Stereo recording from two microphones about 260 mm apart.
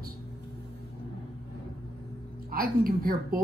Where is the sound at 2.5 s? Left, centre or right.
Right.